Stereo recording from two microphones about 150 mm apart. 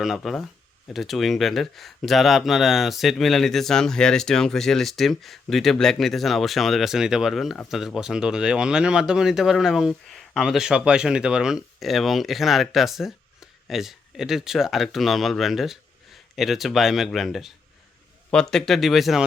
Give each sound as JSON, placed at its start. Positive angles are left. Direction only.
{"t": 0.0, "sound": "speech", "side_deg": 0}
{"t": 18.5, "sound": "speech", "side_deg": 0}